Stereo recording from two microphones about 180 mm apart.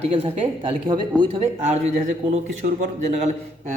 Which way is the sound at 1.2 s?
30° right (ahead or behind).